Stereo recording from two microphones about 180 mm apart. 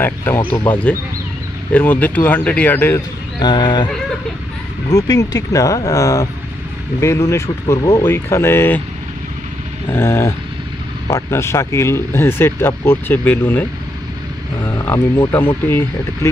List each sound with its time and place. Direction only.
0.0 s speech: 10° left (ahead or behind)
3.3 s speech: 25° left (ahead or behind)
9.8 s speech: 15° left (ahead or behind)